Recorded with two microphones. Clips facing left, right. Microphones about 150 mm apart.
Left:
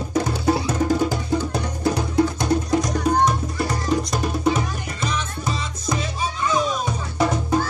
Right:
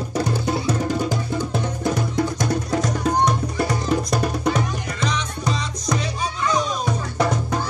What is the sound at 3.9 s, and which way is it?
Music, centre (ahead or behind).